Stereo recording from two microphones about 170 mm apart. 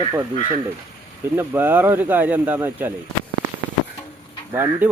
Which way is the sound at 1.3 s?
10° right (ahead or behind).